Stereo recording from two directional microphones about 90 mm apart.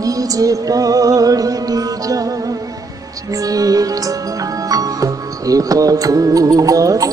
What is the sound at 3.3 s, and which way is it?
Music, 45° right (ahead or behind).